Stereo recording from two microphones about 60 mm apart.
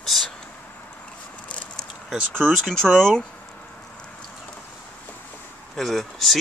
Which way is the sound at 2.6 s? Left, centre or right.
Centre.